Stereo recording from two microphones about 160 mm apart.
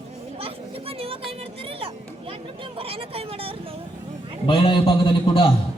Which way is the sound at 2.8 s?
35° right (ahead or behind).